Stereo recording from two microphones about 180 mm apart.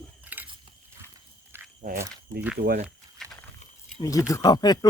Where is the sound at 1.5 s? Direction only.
15° right (ahead or behind).